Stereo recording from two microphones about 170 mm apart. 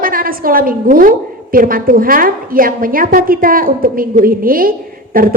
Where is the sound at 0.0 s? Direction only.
55° right (ahead or behind).